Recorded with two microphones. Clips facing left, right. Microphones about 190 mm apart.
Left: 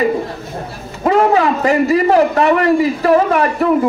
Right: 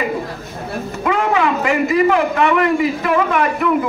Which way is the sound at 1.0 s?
35° left (ahead or behind).